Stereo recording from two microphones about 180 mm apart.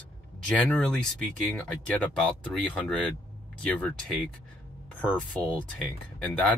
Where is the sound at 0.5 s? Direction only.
5° left (ahead or behind).